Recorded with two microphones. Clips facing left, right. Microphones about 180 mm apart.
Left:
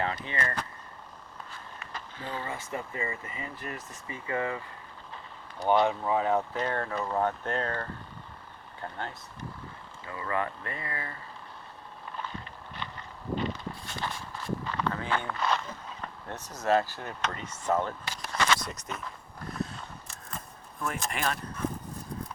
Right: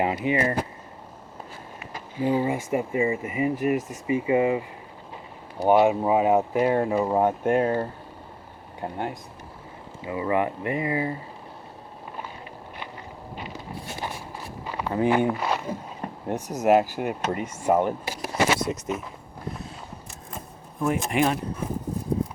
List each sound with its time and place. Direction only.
0.0 s speech: 15° right (ahead or behind)
1.9 s speech: 10° right (ahead or behind)
5.1 s a sound: 10° right (ahead or behind)
6.1 s speech: 15° right (ahead or behind)
12.1 s a sound: 10° right (ahead or behind)
13.3 s walk: 10° right (ahead or behind)
20.8 s speech: 5° right (ahead or behind)